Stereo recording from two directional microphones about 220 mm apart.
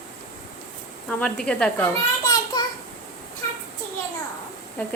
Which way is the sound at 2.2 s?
15° left (ahead or behind).